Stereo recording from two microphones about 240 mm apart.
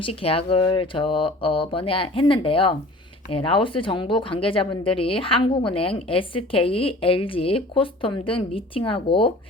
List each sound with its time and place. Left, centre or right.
0.0 s speech: left